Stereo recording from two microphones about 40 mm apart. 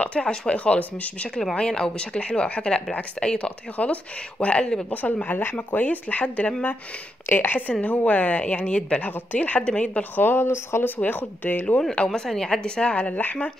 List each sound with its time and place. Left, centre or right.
0.0 s speech: left
1.3 s a woman's voice: centre
4.9 s speech: left
7.2 s a woman's voice: left
7.8 s speech: left
9.0 s speech: left
9.6 s speech: left
10.1 s speech: left
11.0 s speech: left
12.1 s a woman's voice: centre; by 13.2 s left
13.2 s speech: left